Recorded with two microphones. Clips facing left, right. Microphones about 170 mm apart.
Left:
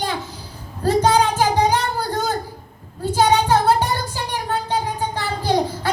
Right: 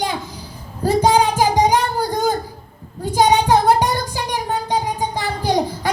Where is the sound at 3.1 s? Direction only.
15° right (ahead or behind).